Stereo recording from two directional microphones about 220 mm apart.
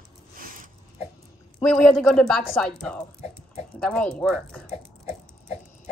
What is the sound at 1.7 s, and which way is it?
Speech, centre (ahead or behind).